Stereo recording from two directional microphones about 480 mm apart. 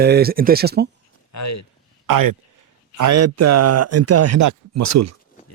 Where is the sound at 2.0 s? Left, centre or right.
Right.